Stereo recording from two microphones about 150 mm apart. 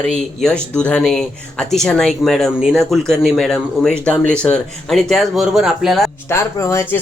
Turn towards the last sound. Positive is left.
turn(degrees=15)  # may be behind; listen again after turning